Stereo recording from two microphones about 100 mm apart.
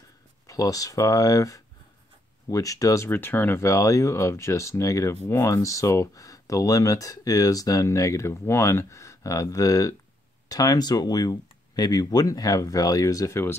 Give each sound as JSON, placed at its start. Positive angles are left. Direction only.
{"t": 0.5, "sound": "speech", "side_deg": 35}